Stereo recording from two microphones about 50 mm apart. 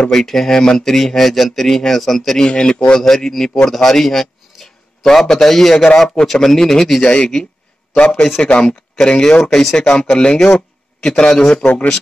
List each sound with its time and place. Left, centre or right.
0.1 s speech: centre
7.0 s a man's voice: centre